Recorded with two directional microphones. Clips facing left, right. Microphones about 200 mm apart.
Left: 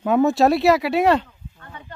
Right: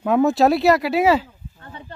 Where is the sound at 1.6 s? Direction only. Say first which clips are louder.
Right 2 dB; 30° right (ahead or behind).